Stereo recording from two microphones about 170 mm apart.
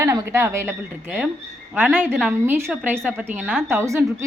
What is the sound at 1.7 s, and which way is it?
A woman's voice, 5° right (ahead or behind).